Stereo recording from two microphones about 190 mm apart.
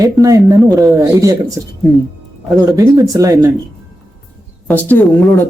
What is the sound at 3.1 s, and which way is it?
Speech, 15° right (ahead or behind).